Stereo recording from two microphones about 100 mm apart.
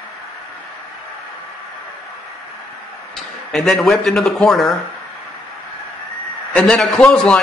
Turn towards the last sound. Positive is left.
turn(degrees=5)  # may be behind; listen again after turning